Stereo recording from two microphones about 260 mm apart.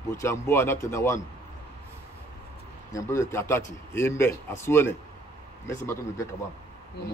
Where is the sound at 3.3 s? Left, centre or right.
Centre.